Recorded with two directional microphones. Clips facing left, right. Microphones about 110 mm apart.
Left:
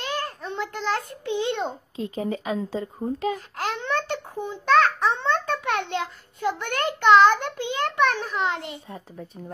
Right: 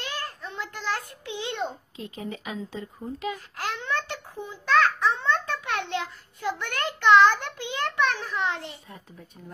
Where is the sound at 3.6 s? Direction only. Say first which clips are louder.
Left 1 dB; 25° left (ahead or behind).